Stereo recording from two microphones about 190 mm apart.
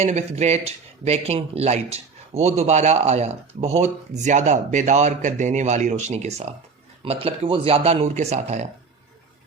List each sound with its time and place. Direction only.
0.0 s speech: 35° right (ahead or behind)